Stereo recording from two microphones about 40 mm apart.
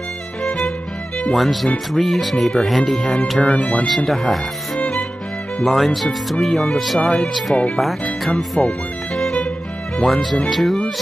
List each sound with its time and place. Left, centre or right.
0.4 s music: left
1.3 s speech: centre
3.4 s speech: left
3.8 s speech: centre
5.7 s speech: centre
7.0 s speech: left
7.7 s speech: centre
8.6 s speech: left
10.0 s speech: centre